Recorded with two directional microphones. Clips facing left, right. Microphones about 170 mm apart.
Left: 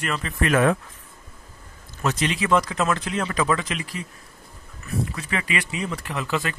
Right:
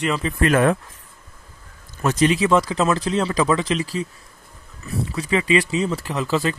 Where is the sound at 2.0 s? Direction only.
45° right (ahead or behind).